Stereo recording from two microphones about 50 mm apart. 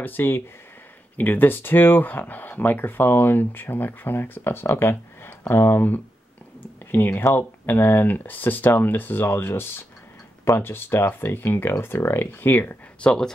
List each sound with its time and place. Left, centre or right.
0.0 s speech: left
6.6 s a sound: left
7.3 s speech: left
13.0 s speech: centre